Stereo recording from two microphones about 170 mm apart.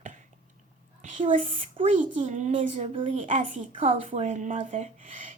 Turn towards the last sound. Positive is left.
turn(degrees=-45)  # may be behind; listen again after turning